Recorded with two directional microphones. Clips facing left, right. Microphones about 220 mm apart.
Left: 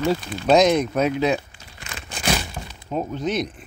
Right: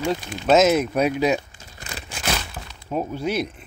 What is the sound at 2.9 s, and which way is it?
Speech, 10° right (ahead or behind).